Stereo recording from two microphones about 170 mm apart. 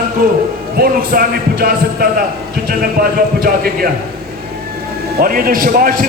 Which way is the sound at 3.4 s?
60° right (ahead or behind).